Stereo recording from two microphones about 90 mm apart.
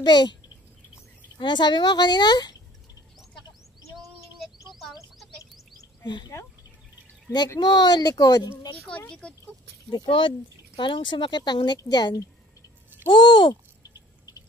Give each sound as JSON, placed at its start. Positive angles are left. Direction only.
{"t": 0.0, "sound": "a woman's voice", "side_deg": 55}
{"t": 1.4, "sound": "a child's voice", "side_deg": 55}
{"t": 3.9, "sound": "a sound", "side_deg": 0}
{"t": 6.0, "sound": "a woman's voice", "side_deg": 60}
{"t": 7.3, "sound": "a child's voice", "side_deg": 45}
{"t": 8.7, "sound": "speech", "side_deg": 10}
{"t": 9.8, "sound": "a woman's voice", "side_deg": 65}
{"t": 13.1, "sound": "a sound", "side_deg": 60}